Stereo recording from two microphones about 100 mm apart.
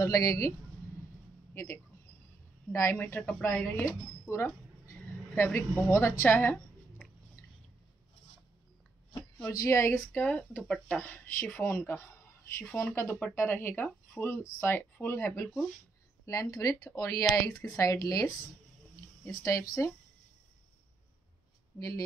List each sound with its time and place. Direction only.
0.0 s speech: 35° left (ahead or behind)
1.5 s a man's voice: 20° left (ahead or behind)
3.0 s speech: 15° left (ahead or behind)
4.3 s a sound: 30° left (ahead or behind)
5.3 s speech: 20° left (ahead or behind)
9.6 s speech: 30° left (ahead or behind)
19.2 s speech: 30° left (ahead or behind)
21.7 s speech: 35° left (ahead or behind)